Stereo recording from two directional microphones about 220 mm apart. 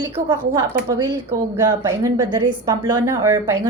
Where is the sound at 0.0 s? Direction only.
20° right (ahead or behind).